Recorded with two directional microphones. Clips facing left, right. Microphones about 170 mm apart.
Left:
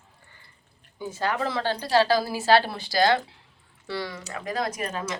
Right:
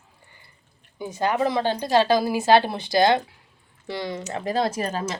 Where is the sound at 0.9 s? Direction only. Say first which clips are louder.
Right 4 dB; 15° right (ahead or behind).